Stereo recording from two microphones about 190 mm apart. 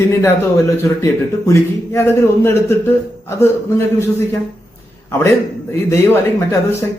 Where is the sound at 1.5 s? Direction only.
15° left (ahead or behind).